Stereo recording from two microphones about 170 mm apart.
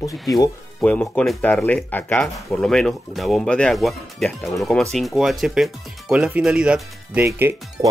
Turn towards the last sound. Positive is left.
turn(degrees=-15)  # may be behind; listen again after turning